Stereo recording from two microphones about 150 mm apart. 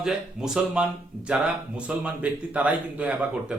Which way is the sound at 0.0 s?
5° right (ahead or behind).